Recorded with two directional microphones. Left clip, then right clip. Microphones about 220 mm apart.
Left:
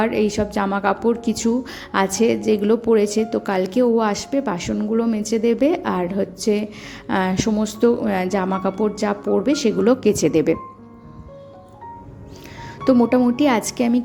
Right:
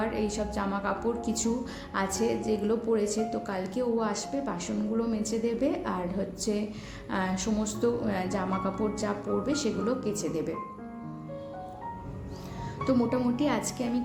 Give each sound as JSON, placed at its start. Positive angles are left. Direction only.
{"t": 0.0, "sound": "a woman's voice", "side_deg": 40}
{"t": 12.8, "sound": "a woman's voice", "side_deg": 35}